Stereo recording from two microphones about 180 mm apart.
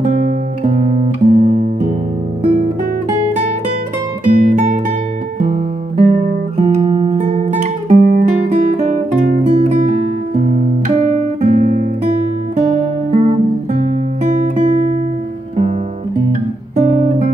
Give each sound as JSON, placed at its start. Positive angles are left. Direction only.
{"t": 0.7, "sound": "guitar", "side_deg": -35}
{"t": 1.2, "sound": "guitar", "side_deg": -50}
{"t": 4.4, "sound": "music", "side_deg": -45}
{"t": 5.4, "sound": "guitar", "side_deg": -45}
{"t": 11.1, "sound": "guitar", "side_deg": -45}
{"t": 16.7, "sound": "guitar", "side_deg": -40}